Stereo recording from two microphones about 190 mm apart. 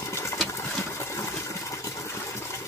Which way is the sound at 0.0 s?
15° left (ahead or behind).